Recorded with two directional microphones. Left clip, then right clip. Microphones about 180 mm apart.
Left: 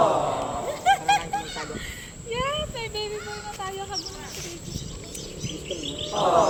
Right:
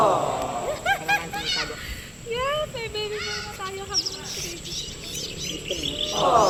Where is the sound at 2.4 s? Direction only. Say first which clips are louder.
Right 2 dB; 5° left (ahead or behind).